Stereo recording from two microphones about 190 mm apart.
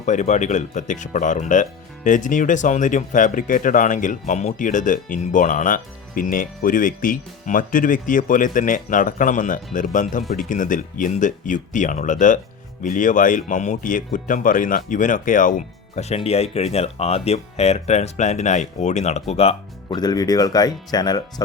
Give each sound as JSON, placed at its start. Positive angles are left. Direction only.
{"t": 0.0, "sound": "speech", "side_deg": 40}
{"t": 20.0, "sound": "speech", "side_deg": 20}